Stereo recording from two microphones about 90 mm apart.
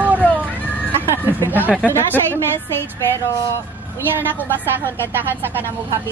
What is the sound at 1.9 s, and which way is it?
Speech, 25° left (ahead or behind).